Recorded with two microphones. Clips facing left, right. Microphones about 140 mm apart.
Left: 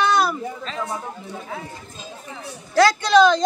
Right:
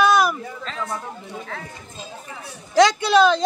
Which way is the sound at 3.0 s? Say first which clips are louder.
Left 1 dB; 5° right (ahead or behind).